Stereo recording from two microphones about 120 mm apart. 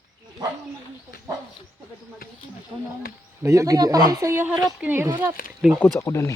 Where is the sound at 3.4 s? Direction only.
25° right (ahead or behind).